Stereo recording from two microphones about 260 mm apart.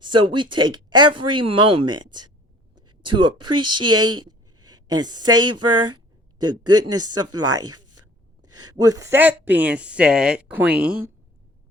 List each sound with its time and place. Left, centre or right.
0.0 s speech: centre
2.7 s a sound: right
3.2 s speech: centre
3.5 s speech: right
3.8 s speech: centre
7.7 s a sound: right
8.6 s speech: centre